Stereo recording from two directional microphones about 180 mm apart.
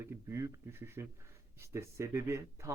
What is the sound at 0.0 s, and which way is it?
Speech, 15° right (ahead or behind).